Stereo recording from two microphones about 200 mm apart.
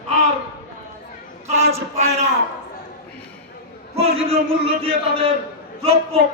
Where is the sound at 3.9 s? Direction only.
30° right (ahead or behind).